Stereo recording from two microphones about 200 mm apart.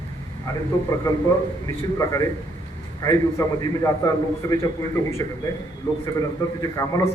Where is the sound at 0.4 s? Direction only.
15° left (ahead or behind).